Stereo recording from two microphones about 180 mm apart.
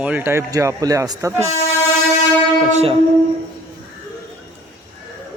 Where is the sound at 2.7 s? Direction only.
35° right (ahead or behind).